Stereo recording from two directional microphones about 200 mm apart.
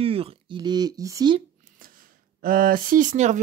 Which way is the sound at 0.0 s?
30° right (ahead or behind).